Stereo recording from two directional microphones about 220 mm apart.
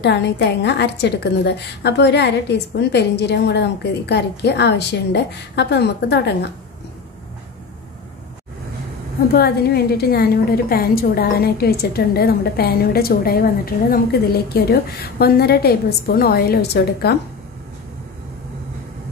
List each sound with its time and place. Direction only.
0.0 s a woman's voice: 50° left (ahead or behind)
9.3 s a woman's voice: 45° left (ahead or behind)